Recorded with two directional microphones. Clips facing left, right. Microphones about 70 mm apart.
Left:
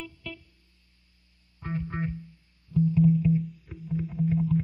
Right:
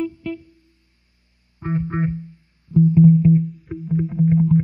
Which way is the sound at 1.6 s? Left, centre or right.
Right.